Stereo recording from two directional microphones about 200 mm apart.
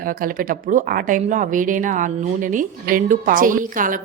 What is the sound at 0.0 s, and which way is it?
Speech, 45° right (ahead or behind).